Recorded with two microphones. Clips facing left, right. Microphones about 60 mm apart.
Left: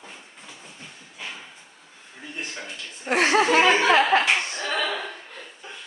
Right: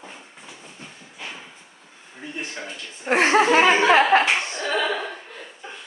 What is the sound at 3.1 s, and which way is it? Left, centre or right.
Chuckle, right.